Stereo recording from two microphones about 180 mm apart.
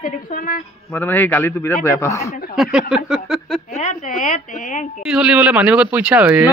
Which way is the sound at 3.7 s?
40° left (ahead or behind).